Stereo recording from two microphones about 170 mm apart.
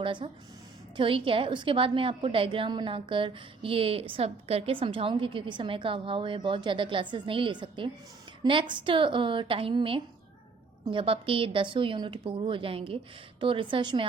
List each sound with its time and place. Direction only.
0.0 s a woman's voice: 30° right (ahead or behind)